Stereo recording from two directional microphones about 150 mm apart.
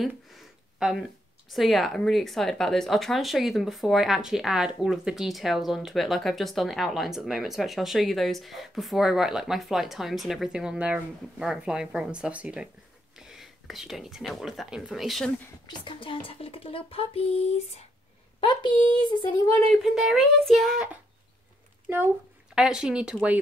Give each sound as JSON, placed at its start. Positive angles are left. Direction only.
{"t": 0.4, "sound": "a sound", "side_deg": -5}
{"t": 1.5, "sound": "speech", "side_deg": 0}
{"t": 15.6, "sound": "speech", "side_deg": 30}
{"t": 18.4, "sound": "speech", "side_deg": 35}
{"t": 19.7, "sound": "speech", "side_deg": 0}
{"t": 22.6, "sound": "speech", "side_deg": -5}